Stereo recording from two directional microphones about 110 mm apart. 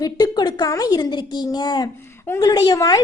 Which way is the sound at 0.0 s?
40° left (ahead or behind).